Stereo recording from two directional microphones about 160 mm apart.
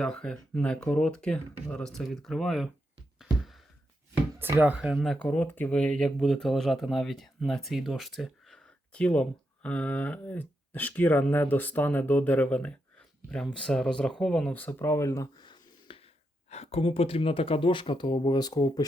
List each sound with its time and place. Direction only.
0.0 s speech: 5° left (ahead or behind)
4.4 s speech: 15° right (ahead or behind); by 16.0 s 30° left (ahead or behind)
16.5 s speech: 40° left (ahead or behind); by 18.9 s 25° left (ahead or behind)